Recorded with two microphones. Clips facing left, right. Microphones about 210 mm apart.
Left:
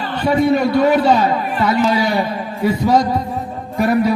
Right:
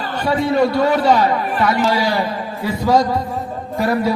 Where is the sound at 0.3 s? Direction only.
20° left (ahead or behind).